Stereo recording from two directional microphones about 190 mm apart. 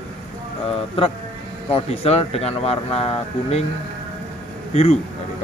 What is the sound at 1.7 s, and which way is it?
Speech, 35° left (ahead or behind).